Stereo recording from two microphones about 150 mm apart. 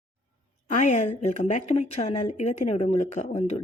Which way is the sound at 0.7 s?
55° left (ahead or behind).